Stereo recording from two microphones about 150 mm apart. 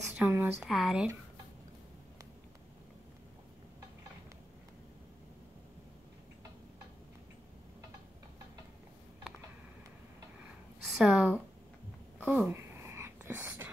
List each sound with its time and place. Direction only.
0.1 s speech: 10° right (ahead or behind)
0.7 s speech: centre (ahead or behind)
10.9 s a sound: centre (ahead or behind)